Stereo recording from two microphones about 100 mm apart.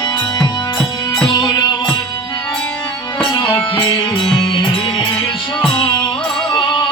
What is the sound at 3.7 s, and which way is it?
Music, 55° left (ahead or behind).